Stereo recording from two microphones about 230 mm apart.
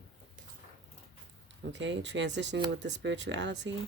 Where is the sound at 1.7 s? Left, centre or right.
Right.